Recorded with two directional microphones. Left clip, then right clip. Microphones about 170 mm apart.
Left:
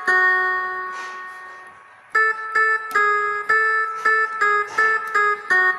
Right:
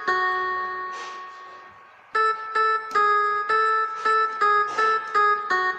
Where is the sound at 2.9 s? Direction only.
45° left (ahead or behind).